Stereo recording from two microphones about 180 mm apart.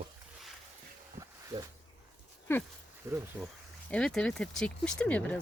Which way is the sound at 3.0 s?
20° right (ahead or behind).